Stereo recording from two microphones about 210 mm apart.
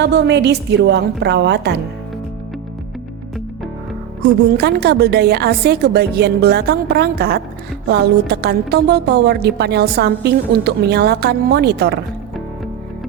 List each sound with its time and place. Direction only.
0.0 s a woman's voice: 55° right (ahead or behind)
4.2 s a woman's voice: 50° right (ahead or behind)